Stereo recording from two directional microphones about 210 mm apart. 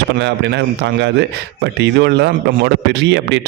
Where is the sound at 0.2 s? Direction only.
55° right (ahead or behind).